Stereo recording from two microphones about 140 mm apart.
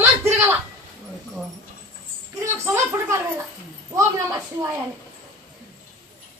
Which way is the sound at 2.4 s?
20° right (ahead or behind).